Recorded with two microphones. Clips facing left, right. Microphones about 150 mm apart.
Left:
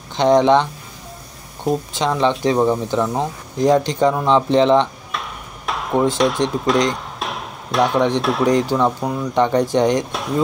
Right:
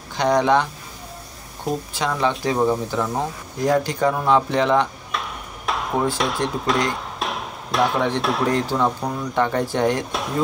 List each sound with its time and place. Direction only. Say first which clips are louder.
0.1 s speech: left 5 dB; 25° left (ahead or behind)
2.0 s speech: left 3 dB; 20° left (ahead or behind)
5.1 s a sound: even; centre (ahead or behind)
6.1 s speech: left 5 dB; centre (ahead or behind)
8.5 s speech: left 6 dB; 15° left (ahead or behind)
10.1 s a sound: left 3 dB; centre (ahead or behind)